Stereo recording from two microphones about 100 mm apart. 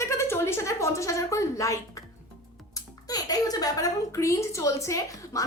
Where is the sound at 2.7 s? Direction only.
40° left (ahead or behind).